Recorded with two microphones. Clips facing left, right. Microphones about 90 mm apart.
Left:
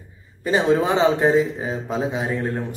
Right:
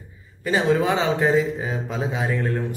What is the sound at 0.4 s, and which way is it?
Speech, 25° left (ahead or behind).